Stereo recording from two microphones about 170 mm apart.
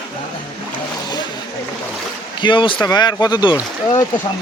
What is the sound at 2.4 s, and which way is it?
Speech, 30° left (ahead or behind).